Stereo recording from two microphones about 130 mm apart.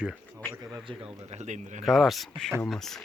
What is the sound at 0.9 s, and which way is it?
Speech, 40° right (ahead or behind).